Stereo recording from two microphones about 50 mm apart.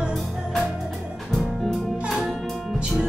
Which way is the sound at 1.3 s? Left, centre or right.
Centre.